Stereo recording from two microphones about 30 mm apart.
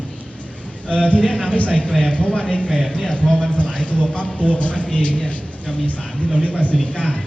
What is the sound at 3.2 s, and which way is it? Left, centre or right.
Speech, centre.